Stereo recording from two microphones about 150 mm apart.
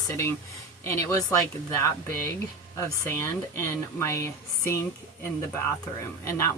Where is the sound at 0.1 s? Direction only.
15° left (ahead or behind).